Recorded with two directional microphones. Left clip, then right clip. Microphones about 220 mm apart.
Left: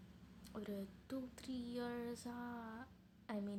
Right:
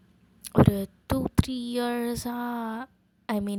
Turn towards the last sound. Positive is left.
turn(degrees=-45)  # may be behind; listen again after turning